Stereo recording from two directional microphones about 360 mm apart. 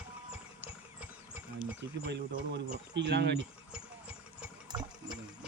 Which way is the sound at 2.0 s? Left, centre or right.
Right.